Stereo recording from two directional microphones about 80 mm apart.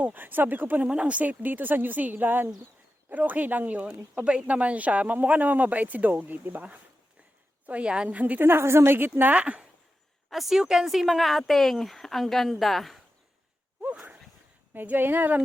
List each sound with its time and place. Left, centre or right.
0.0 s speech: right
10.2 s speech: centre
14.7 s speech: right